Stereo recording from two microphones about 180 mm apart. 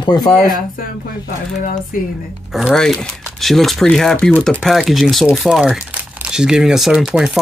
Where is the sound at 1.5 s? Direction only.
45° left (ahead or behind).